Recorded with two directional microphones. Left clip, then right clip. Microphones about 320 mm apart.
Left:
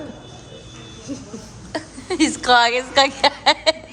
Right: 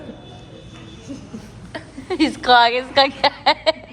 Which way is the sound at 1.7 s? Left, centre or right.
Centre.